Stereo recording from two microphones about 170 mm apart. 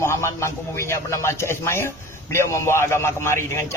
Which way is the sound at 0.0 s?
15° left (ahead or behind).